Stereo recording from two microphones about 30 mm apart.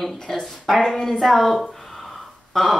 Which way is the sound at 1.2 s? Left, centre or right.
Centre.